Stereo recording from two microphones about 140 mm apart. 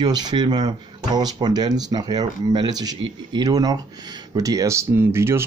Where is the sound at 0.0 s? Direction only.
30° right (ahead or behind).